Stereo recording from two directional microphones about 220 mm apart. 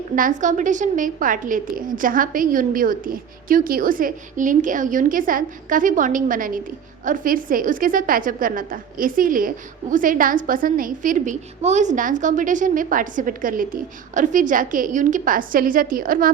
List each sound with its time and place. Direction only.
0.2 s a woman's voice: 35° right (ahead or behind)